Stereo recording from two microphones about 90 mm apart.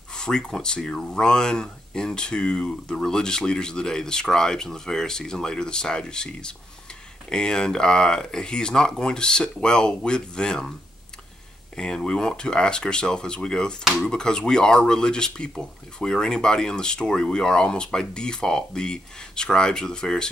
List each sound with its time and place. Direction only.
0.1 s speech: 10° left (ahead or behind)
11.7 s speech: 10° left (ahead or behind)